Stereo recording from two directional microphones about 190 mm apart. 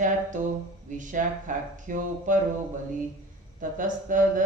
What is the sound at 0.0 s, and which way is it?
Speech, 40° right (ahead or behind).